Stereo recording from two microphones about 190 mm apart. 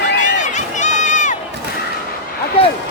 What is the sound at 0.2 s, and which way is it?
Run, 40° left (ahead or behind).